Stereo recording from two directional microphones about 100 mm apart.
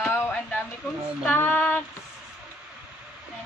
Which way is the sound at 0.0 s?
25° left (ahead or behind).